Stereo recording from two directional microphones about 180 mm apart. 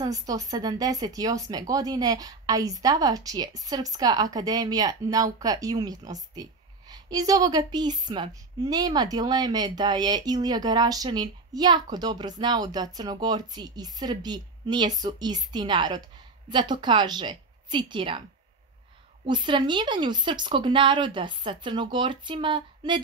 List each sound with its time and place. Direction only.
0.0 s speech: 20° right (ahead or behind)
19.2 s speech: 25° right (ahead or behind)